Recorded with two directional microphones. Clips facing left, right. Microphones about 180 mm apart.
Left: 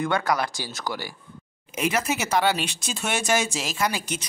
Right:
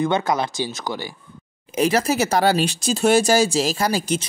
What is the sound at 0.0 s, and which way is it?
Speech, 20° right (ahead or behind).